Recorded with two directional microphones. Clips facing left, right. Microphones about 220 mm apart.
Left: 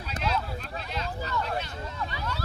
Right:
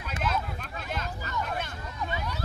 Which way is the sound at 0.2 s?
50° right (ahead or behind).